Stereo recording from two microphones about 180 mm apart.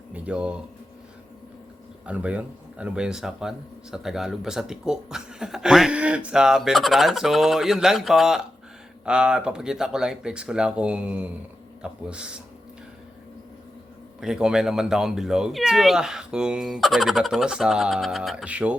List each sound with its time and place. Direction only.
0.1 s speech: 5° right (ahead or behind)
2.0 s speech: 5° right (ahead or behind)
14.2 s speech: 5° right (ahead or behind)